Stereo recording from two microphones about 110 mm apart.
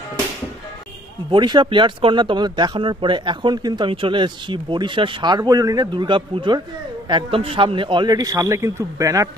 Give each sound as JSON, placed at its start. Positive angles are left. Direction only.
{"t": 1.3, "sound": "a man's voice", "side_deg": -45}